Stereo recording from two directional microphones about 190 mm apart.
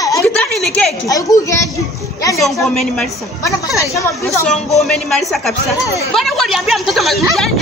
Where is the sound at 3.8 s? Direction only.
15° left (ahead or behind).